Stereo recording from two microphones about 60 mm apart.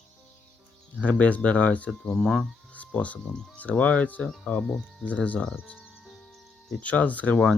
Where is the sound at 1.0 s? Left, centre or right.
Left.